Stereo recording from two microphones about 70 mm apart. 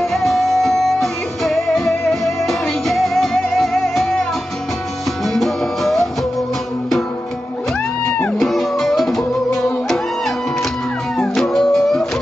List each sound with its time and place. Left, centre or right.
0.0 s music: centre
8.0 s music: centre
8.4 s music: centre